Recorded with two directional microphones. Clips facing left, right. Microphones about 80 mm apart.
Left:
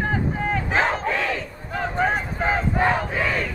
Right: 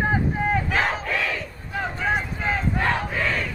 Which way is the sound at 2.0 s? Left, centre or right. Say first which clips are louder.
Left 4 dB; left.